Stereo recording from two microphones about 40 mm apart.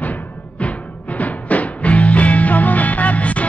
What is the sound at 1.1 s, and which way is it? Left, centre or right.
Music, left.